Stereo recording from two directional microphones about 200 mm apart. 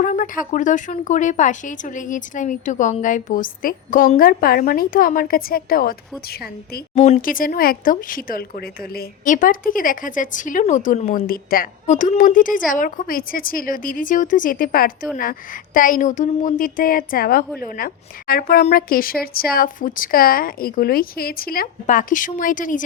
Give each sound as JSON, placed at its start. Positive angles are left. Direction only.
{"t": 0.0, "sound": "speech", "side_deg": 40}
{"t": 6.9, "sound": "speech", "side_deg": 35}